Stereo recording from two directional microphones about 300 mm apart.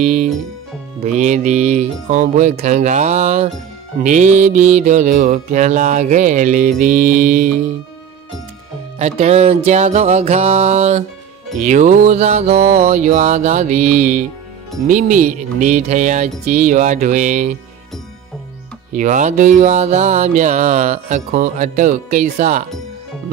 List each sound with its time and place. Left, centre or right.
0.0 s speech: right
1.0 s mantra: right
9.0 s mantra: right
18.9 s mantra: right